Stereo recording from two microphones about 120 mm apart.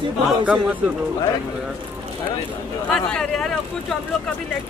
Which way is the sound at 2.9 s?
5° left (ahead or behind).